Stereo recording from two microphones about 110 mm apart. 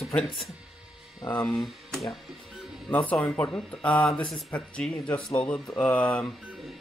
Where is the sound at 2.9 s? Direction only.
15° left (ahead or behind).